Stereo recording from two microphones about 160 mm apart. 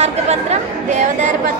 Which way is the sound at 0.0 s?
45° right (ahead or behind).